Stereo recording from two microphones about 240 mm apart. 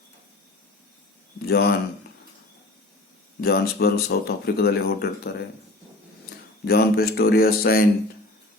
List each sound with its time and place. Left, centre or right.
1.5 s speech: left
3.4 s speech: left
6.7 s speech: left